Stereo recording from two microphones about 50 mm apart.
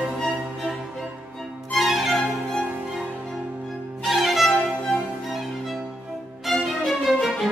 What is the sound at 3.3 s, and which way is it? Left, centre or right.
Music, centre.